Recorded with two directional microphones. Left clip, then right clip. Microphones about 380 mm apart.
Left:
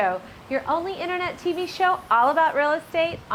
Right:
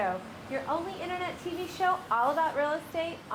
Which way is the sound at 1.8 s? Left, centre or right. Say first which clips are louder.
Left 8 dB; left.